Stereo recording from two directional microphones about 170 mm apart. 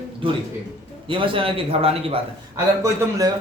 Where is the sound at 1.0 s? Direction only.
30° right (ahead or behind).